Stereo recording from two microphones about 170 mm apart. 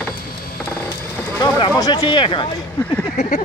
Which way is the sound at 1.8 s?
25° left (ahead or behind).